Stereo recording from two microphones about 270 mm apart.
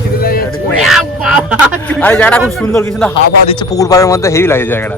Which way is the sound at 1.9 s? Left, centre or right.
Centre.